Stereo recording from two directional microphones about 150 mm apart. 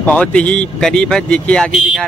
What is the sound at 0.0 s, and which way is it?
Speech, 10° left (ahead or behind).